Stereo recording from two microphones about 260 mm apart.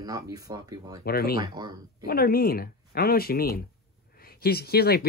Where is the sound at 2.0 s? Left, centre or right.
Left.